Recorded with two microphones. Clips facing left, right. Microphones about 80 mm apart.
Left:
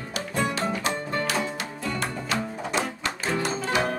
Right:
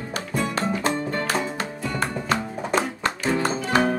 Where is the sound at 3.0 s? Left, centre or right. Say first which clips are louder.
Right 4 dB; right.